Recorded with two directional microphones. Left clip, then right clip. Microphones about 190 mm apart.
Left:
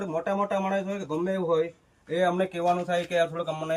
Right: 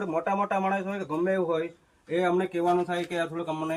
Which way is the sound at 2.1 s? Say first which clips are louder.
Even; 15° left (ahead or behind).